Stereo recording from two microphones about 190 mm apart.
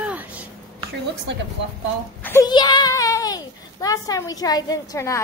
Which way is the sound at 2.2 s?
10° left (ahead or behind).